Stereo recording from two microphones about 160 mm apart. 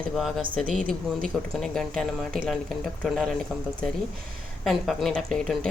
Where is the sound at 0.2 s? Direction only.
Centre (ahead or behind).